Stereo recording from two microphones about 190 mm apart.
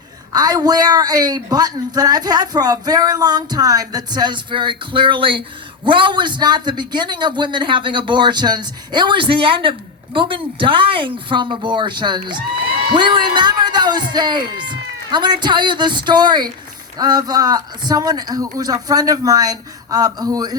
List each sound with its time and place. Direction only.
0.3 s a man's voice: 20° right (ahead or behind)